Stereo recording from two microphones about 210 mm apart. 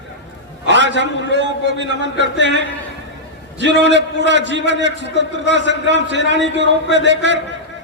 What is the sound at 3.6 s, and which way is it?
A man's voice, 55° right (ahead or behind).